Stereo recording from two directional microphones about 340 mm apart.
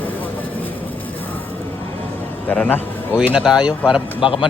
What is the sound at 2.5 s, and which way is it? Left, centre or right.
Speech, centre.